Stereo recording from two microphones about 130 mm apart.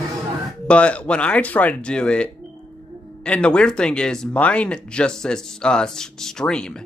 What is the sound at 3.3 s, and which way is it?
Speech, 10° left (ahead or behind).